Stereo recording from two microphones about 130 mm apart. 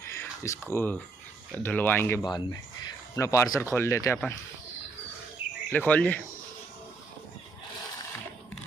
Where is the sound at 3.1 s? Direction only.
25° left (ahead or behind).